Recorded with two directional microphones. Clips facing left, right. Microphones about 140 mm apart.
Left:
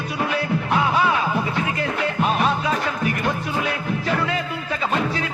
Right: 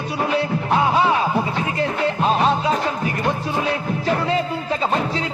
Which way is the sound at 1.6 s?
30° right (ahead or behind).